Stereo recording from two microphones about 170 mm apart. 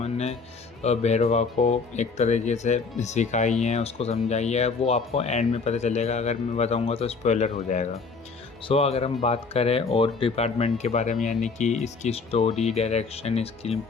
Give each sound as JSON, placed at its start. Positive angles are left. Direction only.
{"t": 0.0, "sound": "music", "side_deg": 40}
{"t": 0.8, "sound": "speech", "side_deg": 40}